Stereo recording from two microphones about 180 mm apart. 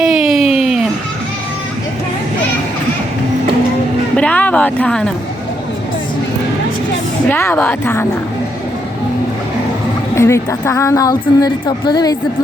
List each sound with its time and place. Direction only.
0.0 s a sound: centre (ahead or behind)
4.1 s speech: 5° left (ahead or behind)
7.3 s a woman's voice: 10° left (ahead or behind)
10.2 s speech: 15° left (ahead or behind)